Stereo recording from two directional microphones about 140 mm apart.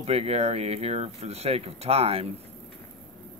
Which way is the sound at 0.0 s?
45° right (ahead or behind).